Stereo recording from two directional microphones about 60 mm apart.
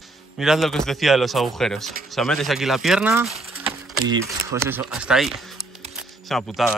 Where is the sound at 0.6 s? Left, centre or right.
Centre.